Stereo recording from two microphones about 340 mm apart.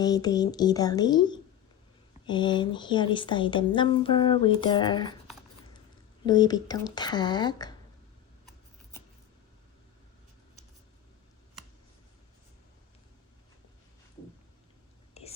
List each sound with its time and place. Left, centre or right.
0.0 s speech: centre
6.2 s speech: centre
15.2 s whispering: centre